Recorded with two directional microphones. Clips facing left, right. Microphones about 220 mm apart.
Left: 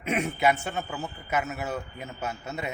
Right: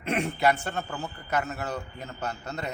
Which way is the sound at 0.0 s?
Centre (ahead or behind).